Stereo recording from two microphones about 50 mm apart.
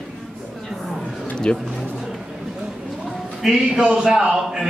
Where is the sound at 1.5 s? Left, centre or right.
Left.